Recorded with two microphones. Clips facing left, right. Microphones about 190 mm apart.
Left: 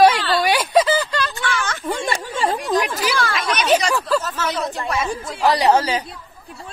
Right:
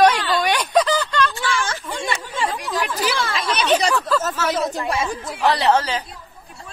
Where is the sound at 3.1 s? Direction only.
25° right (ahead or behind).